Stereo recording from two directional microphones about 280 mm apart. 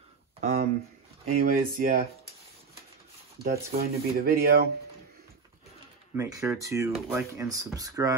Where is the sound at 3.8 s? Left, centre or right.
Right.